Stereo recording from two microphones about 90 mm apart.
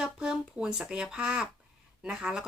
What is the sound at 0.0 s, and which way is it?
Speech, 5° right (ahead or behind).